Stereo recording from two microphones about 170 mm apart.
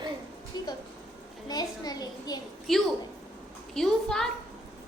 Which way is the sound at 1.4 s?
25° left (ahead or behind).